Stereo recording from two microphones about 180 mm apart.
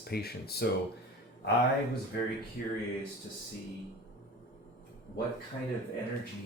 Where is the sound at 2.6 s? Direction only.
55° left (ahead or behind).